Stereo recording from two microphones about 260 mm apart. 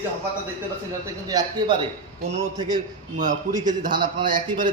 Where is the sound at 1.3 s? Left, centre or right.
Centre.